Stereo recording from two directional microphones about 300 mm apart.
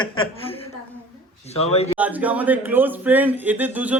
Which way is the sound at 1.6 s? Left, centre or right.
Left.